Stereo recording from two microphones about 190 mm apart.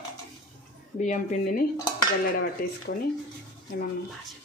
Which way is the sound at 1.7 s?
20° left (ahead or behind).